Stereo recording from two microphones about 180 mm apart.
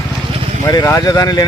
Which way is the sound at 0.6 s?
15° left (ahead or behind).